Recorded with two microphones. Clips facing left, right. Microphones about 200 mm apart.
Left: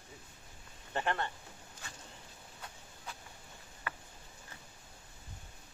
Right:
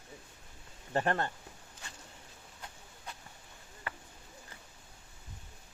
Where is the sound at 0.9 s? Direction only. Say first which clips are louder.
Right 4 dB; 45° right (ahead or behind).